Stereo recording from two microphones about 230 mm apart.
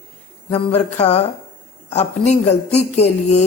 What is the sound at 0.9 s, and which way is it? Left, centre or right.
Speech, left.